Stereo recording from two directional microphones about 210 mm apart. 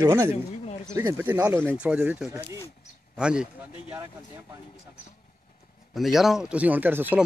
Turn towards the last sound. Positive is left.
turn(degrees=-10)  # may be behind; listen again after turning